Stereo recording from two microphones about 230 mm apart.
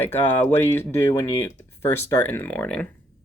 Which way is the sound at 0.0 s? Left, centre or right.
Centre.